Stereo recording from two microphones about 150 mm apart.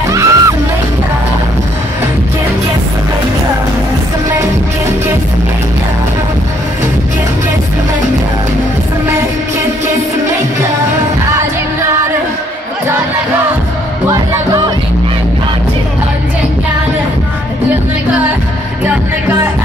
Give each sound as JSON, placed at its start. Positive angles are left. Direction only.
{"t": 0.1, "sound": "music", "side_deg": -20}
{"t": 18.9, "sound": "music", "side_deg": -15}